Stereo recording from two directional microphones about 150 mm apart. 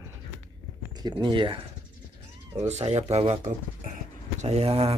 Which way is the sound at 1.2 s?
35° right (ahead or behind).